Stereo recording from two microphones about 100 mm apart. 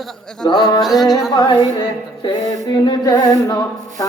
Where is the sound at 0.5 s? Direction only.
50° left (ahead or behind).